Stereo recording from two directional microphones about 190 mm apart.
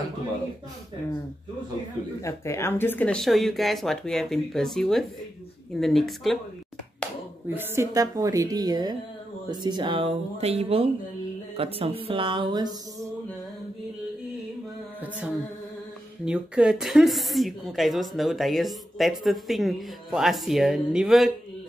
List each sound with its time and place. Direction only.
2.2 s speech: 15° left (ahead or behind)
7.4 s a woman's voice: 10° right (ahead or behind)
16.3 s speech: 5° right (ahead or behind)